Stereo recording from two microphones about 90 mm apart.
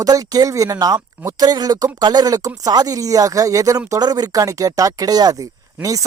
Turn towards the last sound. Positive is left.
turn(degrees=-40)  # may be behind; listen again after turning